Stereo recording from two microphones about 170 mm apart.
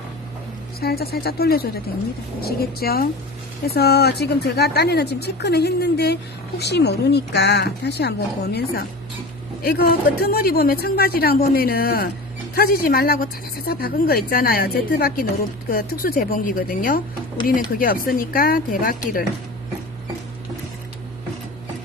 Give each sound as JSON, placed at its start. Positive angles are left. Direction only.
{"t": 0.8, "sound": "speech", "side_deg": 65}
{"t": 9.6, "sound": "speech", "side_deg": 65}